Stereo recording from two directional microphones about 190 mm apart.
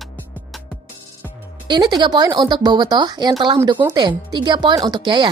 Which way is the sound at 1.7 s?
20° right (ahead or behind).